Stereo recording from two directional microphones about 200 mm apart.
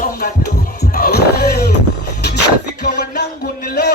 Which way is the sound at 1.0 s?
50° left (ahead or behind).